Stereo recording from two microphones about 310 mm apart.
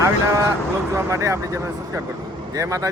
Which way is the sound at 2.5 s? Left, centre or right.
Centre.